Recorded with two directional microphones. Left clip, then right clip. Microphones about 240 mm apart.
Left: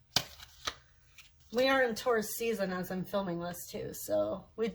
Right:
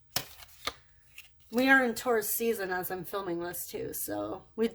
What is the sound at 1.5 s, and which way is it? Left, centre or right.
A woman's voice, right.